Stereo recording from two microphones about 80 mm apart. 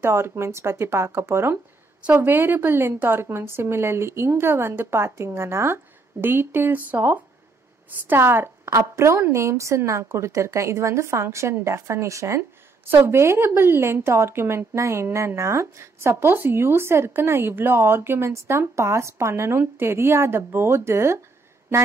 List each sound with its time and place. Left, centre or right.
0.0 s speech: right